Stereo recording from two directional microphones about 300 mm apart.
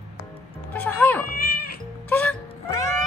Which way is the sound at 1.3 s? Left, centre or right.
Left.